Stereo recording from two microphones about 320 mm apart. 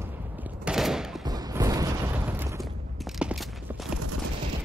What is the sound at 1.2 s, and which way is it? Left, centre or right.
Boom, centre.